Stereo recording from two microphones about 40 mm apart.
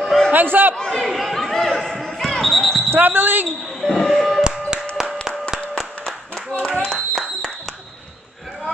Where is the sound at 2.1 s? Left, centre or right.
Centre.